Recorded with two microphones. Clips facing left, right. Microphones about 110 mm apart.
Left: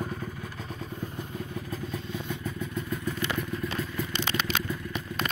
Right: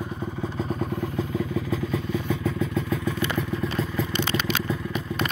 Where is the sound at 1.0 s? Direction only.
90° right.